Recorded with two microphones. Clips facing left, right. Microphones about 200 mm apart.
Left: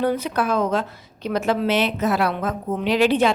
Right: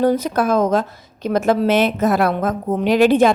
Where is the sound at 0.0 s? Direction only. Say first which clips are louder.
Right 5 dB; 40° right (ahead or behind).